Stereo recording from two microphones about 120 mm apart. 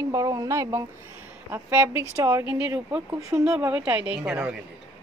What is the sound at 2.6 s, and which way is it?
Speech, 10° right (ahead or behind).